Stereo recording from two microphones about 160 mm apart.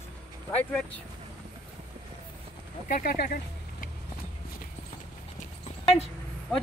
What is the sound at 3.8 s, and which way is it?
Vehicle, 60° left (ahead or behind).